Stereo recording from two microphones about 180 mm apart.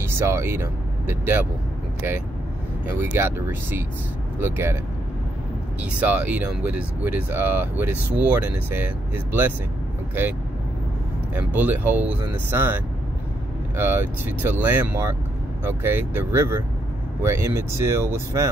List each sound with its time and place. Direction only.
0.0 s speech: 15° right (ahead or behind)
2.9 s speech: 10° right (ahead or behind)
5.8 s speech: 10° right (ahead or behind)
11.3 s speech: 10° right (ahead or behind)